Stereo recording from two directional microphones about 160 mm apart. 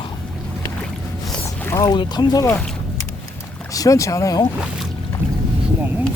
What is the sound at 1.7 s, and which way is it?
Speech, 25° left (ahead or behind).